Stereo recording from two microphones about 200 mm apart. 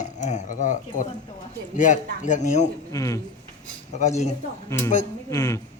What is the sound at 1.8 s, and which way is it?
Speech, 40° left (ahead or behind).